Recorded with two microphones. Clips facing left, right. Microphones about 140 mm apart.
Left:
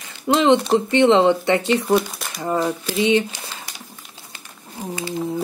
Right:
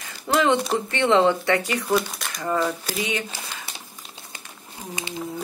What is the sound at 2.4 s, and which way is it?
Speech, 25° left (ahead or behind).